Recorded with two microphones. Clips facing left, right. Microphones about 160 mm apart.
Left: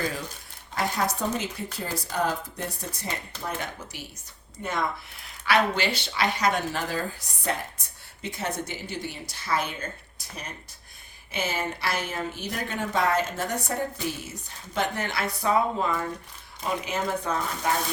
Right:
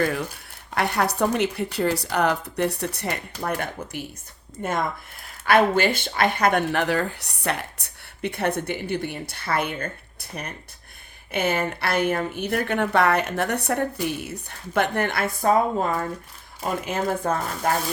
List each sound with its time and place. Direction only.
0.7 s speech: 65° right (ahead or behind); by 17.7 s 50° right (ahead or behind)